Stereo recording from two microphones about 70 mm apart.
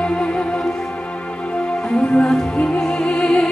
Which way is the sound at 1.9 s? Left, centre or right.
Centre.